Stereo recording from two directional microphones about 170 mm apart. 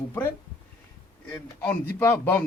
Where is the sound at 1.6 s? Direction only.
10° left (ahead or behind).